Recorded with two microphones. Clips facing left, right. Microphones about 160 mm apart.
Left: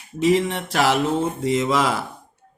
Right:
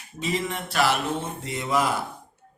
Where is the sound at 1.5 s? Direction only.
90° left.